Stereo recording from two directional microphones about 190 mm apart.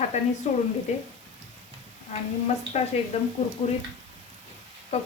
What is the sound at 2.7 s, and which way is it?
Speech, 35° left (ahead or behind).